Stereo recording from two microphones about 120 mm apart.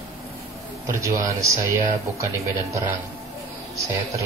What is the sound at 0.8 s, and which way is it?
Speech, 25° right (ahead or behind).